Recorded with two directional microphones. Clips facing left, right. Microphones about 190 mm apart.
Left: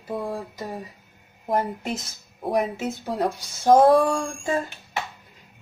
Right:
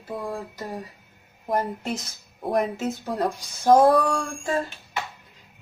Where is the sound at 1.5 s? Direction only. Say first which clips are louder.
Left 1 dB; centre (ahead or behind).